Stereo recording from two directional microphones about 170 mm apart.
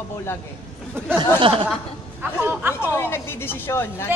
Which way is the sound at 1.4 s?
30° right (ahead or behind).